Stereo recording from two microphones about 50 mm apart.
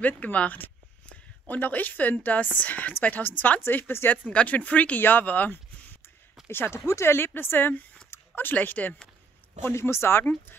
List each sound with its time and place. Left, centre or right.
0.0 s a woman's voice: left
3.6 s speech: left
4.3 s a woman's voice: left
5.5 s a sound: left
6.4 s speech: left
8.1 s a sound: left
8.5 s a woman's voice: left
9.6 s speech: left